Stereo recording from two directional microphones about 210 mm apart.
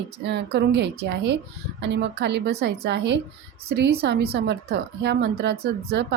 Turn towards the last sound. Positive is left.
turn(degrees=-55)  # may be behind; listen again after turning